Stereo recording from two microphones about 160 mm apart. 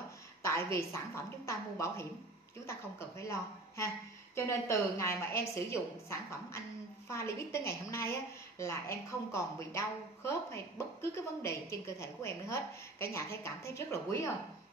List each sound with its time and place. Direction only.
0.4 s a woman's voice: 20° left (ahead or behind)